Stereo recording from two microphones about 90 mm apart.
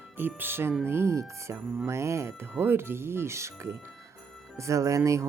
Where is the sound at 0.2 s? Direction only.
20° right (ahead or behind).